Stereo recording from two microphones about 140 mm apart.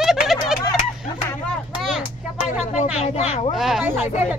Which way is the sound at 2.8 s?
50° left (ahead or behind).